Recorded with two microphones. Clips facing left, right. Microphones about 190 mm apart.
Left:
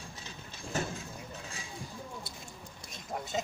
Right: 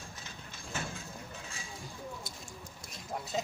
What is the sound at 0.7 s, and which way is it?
Vehicle, 40° left (ahead or behind).